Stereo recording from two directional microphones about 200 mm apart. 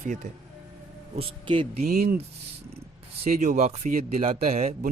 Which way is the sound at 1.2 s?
25° right (ahead or behind).